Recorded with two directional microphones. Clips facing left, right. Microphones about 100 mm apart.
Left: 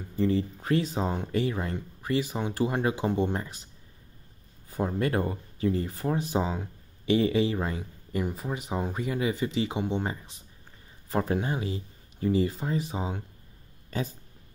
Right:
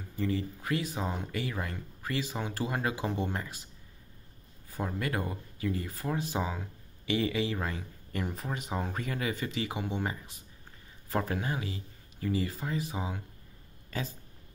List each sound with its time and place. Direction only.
0.2 s speech: 30° left (ahead or behind)
4.6 s speech: 25° left (ahead or behind)
8.3 s speech: 5° left (ahead or behind); by 13.2 s 30° left (ahead or behind)
13.8 s a sound: 25° left (ahead or behind)